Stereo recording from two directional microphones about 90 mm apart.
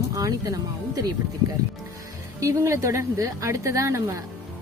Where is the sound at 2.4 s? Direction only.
35° right (ahead or behind).